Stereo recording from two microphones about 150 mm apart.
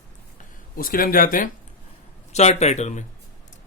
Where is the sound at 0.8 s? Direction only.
70° left (ahead or behind).